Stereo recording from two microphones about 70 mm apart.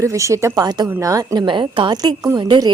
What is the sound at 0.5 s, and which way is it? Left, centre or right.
Speech, right.